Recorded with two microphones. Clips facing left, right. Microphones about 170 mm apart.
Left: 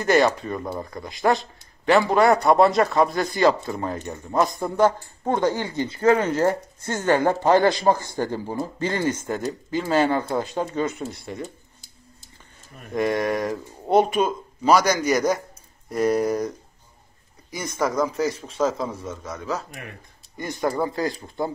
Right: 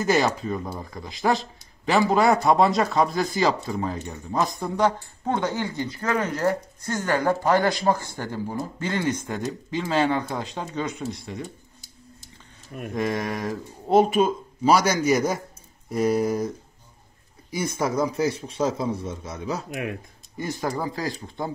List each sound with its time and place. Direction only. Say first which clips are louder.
0.0 s speech: left 3 dB; centre (ahead or behind); by 9.1 s 15° left (ahead or behind)
9.3 s speech: left 3 dB; centre (ahead or behind)
12.9 s speech: left 4 dB; centre (ahead or behind)
17.6 s speech: even; 10° right (ahead or behind)
19.0 s a man's voice: left 1 dB; 30° right (ahead or behind)
19.7 s speech: right 9 dB; 80° right
20.3 s speech: left 3 dB; centre (ahead or behind)